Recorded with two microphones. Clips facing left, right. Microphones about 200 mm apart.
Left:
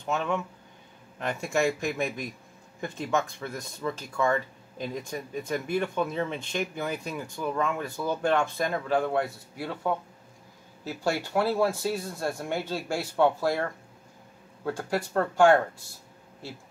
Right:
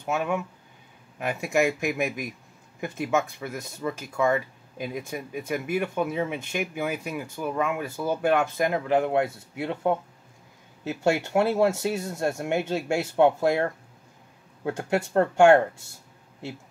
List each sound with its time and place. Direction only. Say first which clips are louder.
0.0 s speech: right 2 dB; 10° right (ahead or behind); by 15.6 s 25° right (ahead or behind)